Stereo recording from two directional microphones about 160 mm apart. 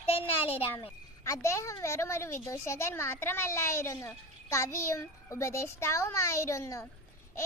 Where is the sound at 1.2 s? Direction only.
20° left (ahead or behind).